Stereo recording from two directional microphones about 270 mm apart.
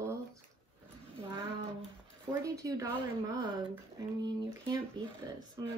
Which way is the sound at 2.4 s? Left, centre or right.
Centre.